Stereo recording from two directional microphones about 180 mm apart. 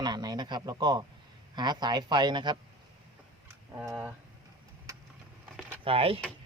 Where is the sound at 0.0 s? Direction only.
20° right (ahead or behind).